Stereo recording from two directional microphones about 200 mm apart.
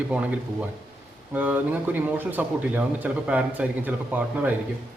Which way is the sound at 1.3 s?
10° right (ahead or behind).